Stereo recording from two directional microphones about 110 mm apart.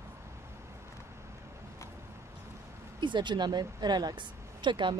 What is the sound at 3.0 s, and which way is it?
Speech, 45° right (ahead or behind).